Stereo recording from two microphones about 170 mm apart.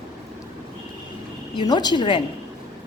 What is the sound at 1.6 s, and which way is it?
Speech, 25° left (ahead or behind).